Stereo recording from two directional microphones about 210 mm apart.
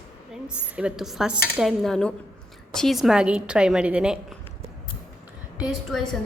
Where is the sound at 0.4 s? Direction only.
5° right (ahead or behind).